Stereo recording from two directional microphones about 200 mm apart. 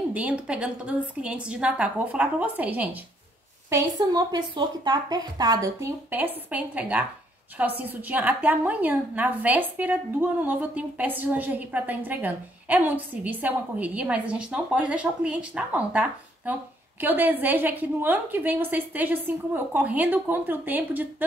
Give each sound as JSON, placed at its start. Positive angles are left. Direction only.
{"t": 0.1, "sound": "a woman's voice", "side_deg": -5}
{"t": 3.7, "sound": "a woman's voice", "side_deg": -20}